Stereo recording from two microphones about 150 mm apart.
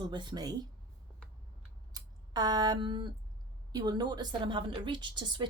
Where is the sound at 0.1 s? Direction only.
30° right (ahead or behind).